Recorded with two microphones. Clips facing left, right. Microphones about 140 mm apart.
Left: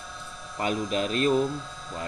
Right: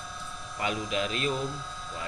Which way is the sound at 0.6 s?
45° left (ahead or behind).